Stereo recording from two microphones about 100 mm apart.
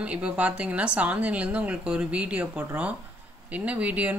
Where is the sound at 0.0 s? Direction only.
15° right (ahead or behind).